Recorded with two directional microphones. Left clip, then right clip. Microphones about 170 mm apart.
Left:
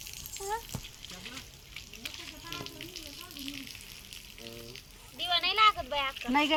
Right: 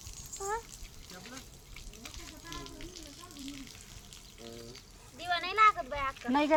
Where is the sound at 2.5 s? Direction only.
45° right (ahead or behind).